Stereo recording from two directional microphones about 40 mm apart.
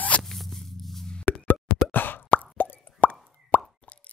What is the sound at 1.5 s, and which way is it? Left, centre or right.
Plop, left.